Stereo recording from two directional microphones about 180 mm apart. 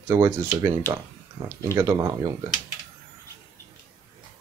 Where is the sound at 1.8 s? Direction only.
15° right (ahead or behind).